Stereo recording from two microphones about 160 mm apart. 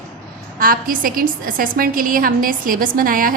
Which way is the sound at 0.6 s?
60° right (ahead or behind).